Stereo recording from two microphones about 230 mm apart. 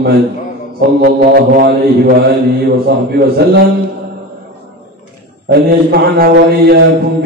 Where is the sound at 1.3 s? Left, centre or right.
Right.